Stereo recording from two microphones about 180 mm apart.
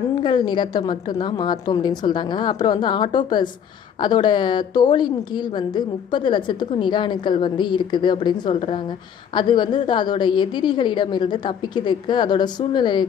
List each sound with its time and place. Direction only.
0.2 s a woman's voice: 25° left (ahead or behind)